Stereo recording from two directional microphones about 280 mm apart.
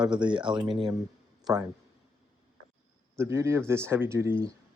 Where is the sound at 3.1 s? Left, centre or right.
Centre.